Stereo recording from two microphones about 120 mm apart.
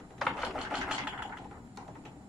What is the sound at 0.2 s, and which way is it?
Ratchet, centre (ahead or behind).